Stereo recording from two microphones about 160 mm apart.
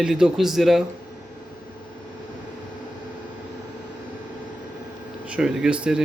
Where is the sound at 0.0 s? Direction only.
5° right (ahead or behind).